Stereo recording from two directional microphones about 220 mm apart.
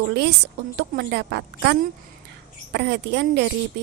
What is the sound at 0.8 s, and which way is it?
A woman's voice, 50° right (ahead or behind).